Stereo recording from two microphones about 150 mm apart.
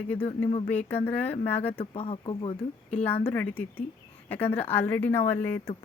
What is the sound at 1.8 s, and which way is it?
Speech, 40° left (ahead or behind).